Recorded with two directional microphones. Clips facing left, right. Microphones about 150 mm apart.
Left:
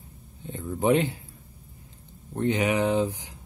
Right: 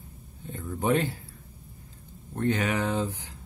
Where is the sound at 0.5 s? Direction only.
20° left (ahead or behind).